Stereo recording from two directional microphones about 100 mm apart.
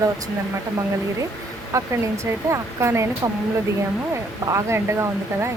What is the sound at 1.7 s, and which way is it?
Speech, 35° right (ahead or behind).